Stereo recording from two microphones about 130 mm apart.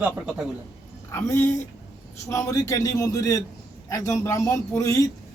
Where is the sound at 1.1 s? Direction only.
20° left (ahead or behind).